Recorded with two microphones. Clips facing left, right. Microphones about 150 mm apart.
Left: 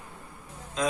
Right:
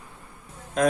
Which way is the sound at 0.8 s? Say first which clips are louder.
Right 7 dB; 55° right (ahead or behind).